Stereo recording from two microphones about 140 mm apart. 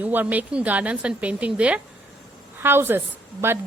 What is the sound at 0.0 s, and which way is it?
A woman's voice, 15° right (ahead or behind).